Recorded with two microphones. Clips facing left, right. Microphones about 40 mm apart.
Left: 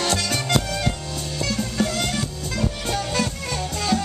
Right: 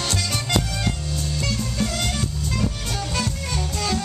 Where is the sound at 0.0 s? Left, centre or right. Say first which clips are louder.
Left 3 dB; centre.